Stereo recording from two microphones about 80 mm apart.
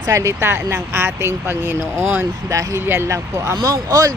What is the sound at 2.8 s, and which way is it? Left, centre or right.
Speech, right.